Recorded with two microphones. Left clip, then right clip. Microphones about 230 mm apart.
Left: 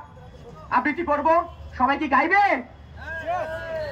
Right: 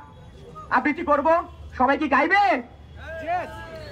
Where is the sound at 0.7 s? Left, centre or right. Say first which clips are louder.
Right 1 dB; centre.